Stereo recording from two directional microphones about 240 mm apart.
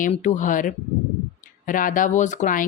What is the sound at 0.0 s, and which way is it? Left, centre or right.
Speech, left.